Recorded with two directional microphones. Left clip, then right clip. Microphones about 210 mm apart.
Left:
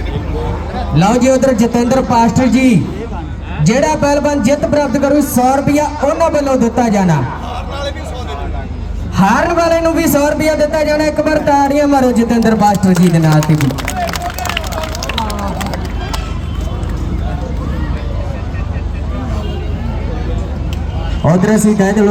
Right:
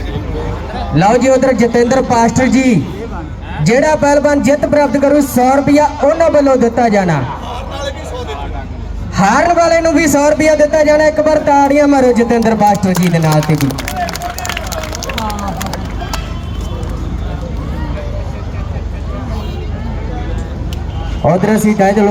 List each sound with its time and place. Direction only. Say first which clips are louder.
0.9 s a man's voice: right 2 dB; 15° right (ahead or behind)
9.1 s a man's voice: right 2 dB; 15° right (ahead or behind)
15.4 s run: even; 50° right (ahead or behind)
21.2 s a man's voice: right 1 dB; 15° right (ahead or behind)